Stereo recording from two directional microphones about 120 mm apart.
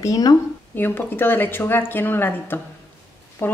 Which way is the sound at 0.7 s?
15° left (ahead or behind).